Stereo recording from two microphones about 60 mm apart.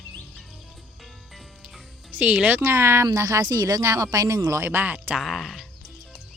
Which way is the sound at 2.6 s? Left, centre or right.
Right.